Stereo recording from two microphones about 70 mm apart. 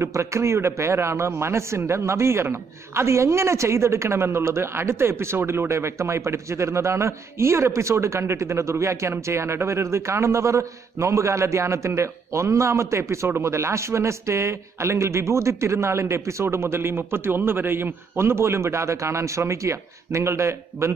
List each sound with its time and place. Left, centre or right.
0.0 s a woman's voice: right